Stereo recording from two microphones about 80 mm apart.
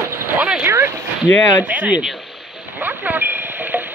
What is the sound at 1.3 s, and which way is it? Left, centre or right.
Speech, left.